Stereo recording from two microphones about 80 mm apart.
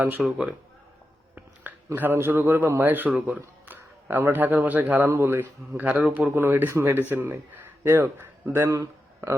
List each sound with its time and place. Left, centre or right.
0.0 s speech: centre
2.0 s a man's voice: right
6.3 s speech: right
8.7 s a sound: right